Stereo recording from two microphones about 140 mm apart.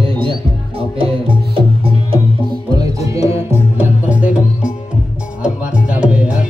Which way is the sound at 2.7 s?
25° right (ahead or behind).